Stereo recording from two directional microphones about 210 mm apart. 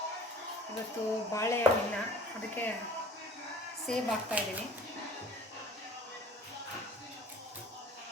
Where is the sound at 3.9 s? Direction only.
Centre (ahead or behind).